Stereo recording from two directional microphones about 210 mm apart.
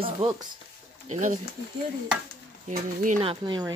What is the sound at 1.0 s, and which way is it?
Speech, 35° right (ahead or behind).